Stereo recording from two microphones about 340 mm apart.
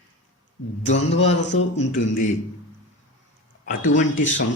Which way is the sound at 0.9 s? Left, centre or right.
Left.